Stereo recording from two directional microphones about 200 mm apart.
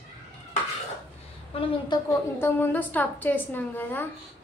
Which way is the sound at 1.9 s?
15° left (ahead or behind).